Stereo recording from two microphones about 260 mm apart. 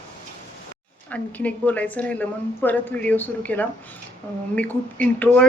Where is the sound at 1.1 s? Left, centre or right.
Centre.